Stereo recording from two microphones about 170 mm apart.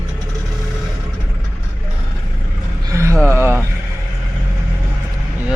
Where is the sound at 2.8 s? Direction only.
15° right (ahead or behind).